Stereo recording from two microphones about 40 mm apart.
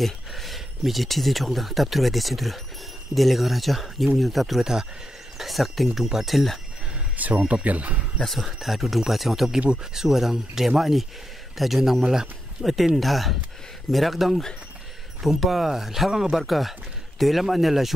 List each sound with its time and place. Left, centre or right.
0.0 s speech: centre
7.2 s speech: right
8.2 s a man's voice: centre